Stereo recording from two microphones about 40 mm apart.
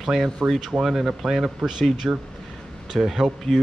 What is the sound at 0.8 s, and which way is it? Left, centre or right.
Speech, centre.